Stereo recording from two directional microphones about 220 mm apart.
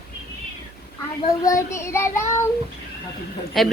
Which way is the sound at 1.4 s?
15° left (ahead or behind).